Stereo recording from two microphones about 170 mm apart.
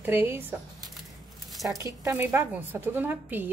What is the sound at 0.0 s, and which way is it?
A woman's voice, 10° right (ahead or behind).